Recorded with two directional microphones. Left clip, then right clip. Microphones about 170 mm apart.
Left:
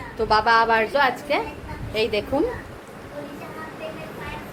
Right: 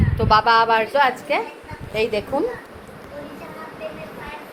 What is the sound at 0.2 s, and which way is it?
Speech, 5° left (ahead or behind).